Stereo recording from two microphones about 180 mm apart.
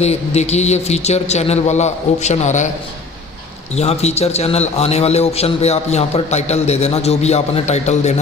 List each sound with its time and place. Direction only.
0.0 s a man's voice: 35° left (ahead or behind)
3.7 s a man's voice: 35° left (ahead or behind)